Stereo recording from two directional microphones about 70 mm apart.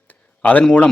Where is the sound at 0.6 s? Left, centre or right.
Centre.